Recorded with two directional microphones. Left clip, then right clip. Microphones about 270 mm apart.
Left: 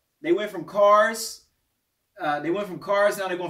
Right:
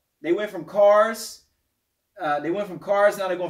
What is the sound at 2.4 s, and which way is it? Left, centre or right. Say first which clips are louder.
Speech: right 1 dB; centre.